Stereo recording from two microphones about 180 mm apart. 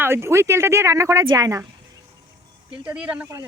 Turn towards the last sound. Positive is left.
turn(degrees=-5)  # may be behind; listen again after turning